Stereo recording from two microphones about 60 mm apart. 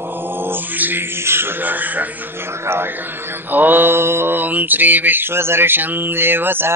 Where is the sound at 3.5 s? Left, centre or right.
Right.